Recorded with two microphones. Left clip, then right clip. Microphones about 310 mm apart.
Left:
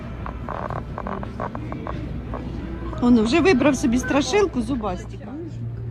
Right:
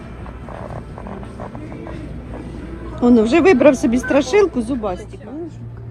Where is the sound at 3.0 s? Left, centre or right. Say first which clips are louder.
Right 5 dB; centre.